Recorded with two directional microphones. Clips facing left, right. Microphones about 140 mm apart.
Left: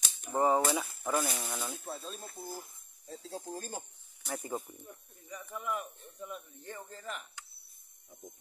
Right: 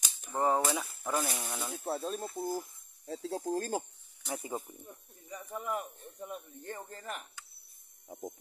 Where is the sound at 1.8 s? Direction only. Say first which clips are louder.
Right 8 dB; 65° right (ahead or behind); by 3.8 s 80° right.